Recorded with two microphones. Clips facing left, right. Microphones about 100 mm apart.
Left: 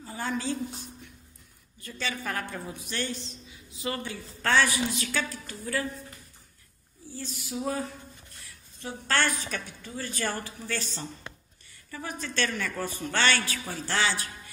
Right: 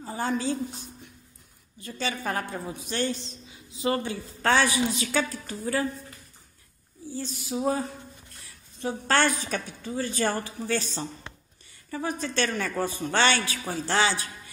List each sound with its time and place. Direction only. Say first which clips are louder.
0.0 s a woman's voice: right 4 dB; 35° right (ahead or behind)
1.8 s speech: right 3 dB; 25° right (ahead or behind)
7.2 s speech: right 4 dB; 25° right (ahead or behind)
8.8 s a woman's voice: right 4 dB; 35° right (ahead or behind)
11.9 s a woman's voice: right 6 dB; 35° right (ahead or behind)
12.7 s speech: right 4 dB; 20° right (ahead or behind)